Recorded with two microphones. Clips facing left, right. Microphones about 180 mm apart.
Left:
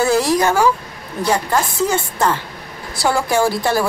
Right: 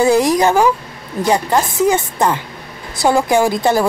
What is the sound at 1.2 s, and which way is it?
A woman's voice, 15° right (ahead or behind).